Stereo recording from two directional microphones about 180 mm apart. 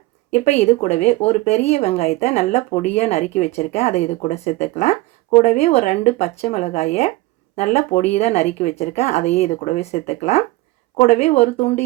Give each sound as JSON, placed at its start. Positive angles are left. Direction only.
{"t": 0.3, "sound": "speech", "side_deg": 40}